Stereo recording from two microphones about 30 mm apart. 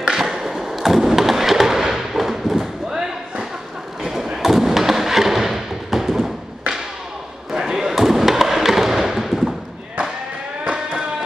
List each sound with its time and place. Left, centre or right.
0.1 s fireworks: centre
4.4 s a sound: centre
7.5 s basketball bounce: right
7.9 s music: centre
10.6 s music: right